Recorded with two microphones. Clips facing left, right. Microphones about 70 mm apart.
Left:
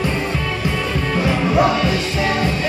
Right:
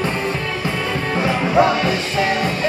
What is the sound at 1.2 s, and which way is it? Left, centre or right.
Music, right.